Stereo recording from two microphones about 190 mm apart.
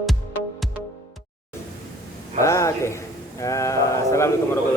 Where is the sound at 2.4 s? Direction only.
15° left (ahead or behind).